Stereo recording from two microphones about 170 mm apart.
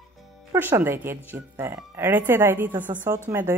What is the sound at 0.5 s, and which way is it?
Speech, 10° right (ahead or behind).